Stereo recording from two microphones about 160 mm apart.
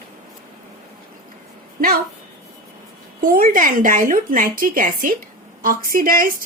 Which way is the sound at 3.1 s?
60° right (ahead or behind).